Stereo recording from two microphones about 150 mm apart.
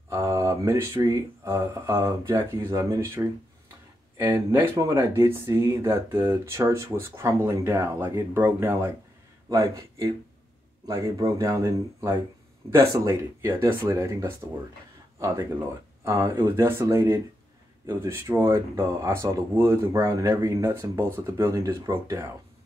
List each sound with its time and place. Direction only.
0.1 s speech: 20° right (ahead or behind)
4.6 s speech: 20° right (ahead or behind)